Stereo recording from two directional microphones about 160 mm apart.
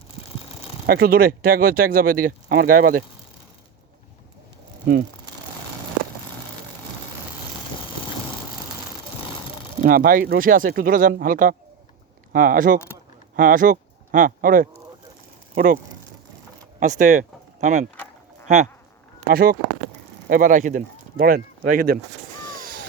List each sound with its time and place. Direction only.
0.9 s speech: 70° right (ahead or behind)
9.8 s speech: 60° right (ahead or behind)
16.8 s speech: 50° right (ahead or behind)
19.3 s speech: 75° right (ahead or behind)
20.2 s speech: 60° right (ahead or behind)
22.4 s vehicle: 60° right (ahead or behind)